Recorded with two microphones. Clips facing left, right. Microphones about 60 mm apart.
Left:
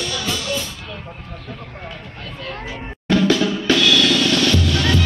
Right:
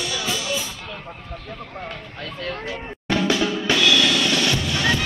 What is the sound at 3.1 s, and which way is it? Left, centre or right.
Music, centre.